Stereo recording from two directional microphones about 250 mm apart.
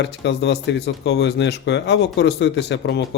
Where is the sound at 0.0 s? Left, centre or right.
Left.